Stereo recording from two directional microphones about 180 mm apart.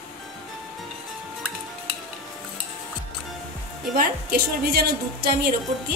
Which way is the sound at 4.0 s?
60° right (ahead or behind).